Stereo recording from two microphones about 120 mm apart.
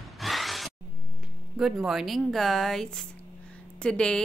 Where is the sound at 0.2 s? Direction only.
Centre (ahead or behind).